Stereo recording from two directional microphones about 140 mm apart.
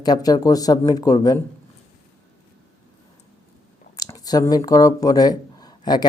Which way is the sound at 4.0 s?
25° left (ahead or behind).